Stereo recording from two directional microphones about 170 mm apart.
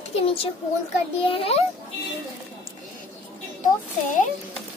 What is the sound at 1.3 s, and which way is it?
Speech, 35° left (ahead or behind).